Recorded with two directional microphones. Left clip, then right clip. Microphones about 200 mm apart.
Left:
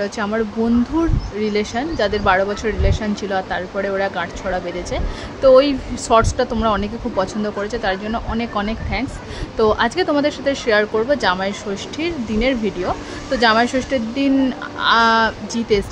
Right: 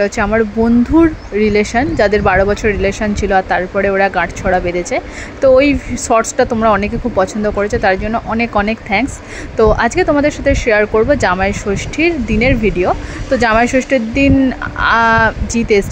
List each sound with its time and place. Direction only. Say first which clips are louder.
0.0 s speech: right 8 dB; 20° right (ahead or behind)